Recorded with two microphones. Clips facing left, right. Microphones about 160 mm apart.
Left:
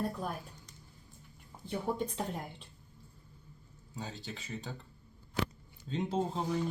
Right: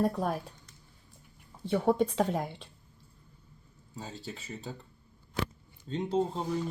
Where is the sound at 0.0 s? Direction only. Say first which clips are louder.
Right 7 dB; 85° right.